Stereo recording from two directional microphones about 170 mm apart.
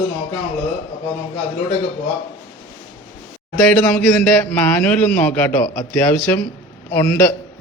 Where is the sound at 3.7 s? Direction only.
10° left (ahead or behind).